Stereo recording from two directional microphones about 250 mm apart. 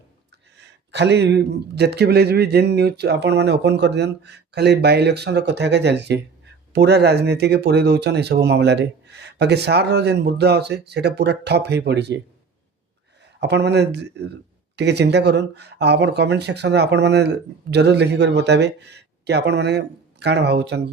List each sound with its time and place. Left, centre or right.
0.6 s a man's voice: right
13.4 s speech: right